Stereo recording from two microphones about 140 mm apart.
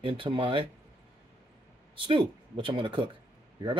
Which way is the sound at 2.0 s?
35° right (ahead or behind).